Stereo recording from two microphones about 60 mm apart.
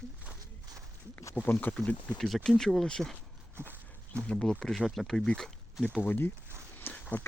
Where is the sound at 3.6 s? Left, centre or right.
Right.